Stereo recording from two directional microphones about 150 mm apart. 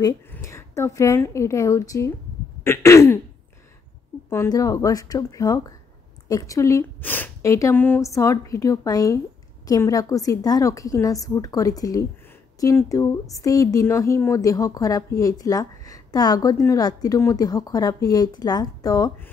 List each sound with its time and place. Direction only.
0.3 s a woman's voice: 20° left (ahead or behind)
2.6 s throat clearing: 15° left (ahead or behind)
4.3 s a woman's voice: 20° left (ahead or behind)